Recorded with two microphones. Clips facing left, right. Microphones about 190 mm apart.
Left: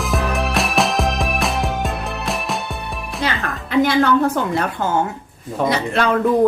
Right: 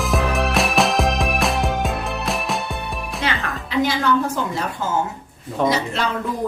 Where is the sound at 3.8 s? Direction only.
60° left (ahead or behind).